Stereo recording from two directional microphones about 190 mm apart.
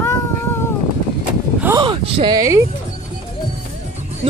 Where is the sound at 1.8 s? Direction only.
30° right (ahead or behind).